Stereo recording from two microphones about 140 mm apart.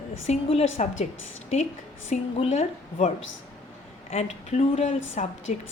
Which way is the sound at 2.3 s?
50° left (ahead or behind).